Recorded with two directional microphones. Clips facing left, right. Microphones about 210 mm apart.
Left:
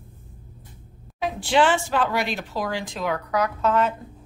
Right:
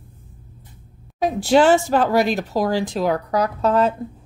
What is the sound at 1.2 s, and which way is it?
Speech, 40° right (ahead or behind).